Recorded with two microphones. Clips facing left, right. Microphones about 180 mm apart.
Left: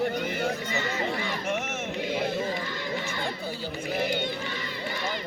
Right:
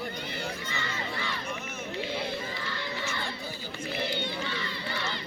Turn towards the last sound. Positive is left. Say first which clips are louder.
# left 5 dB
turn(degrees=50)  # may be behind; listen again after turning